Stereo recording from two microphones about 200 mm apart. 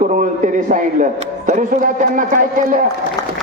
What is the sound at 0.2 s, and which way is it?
A man's voice, 40° right (ahead or behind).